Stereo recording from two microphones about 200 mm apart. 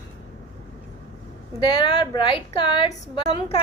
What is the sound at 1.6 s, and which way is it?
A woman's voice, 20° left (ahead or behind).